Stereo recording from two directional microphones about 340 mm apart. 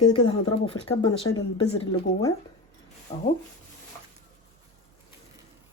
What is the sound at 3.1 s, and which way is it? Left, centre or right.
Speech, centre.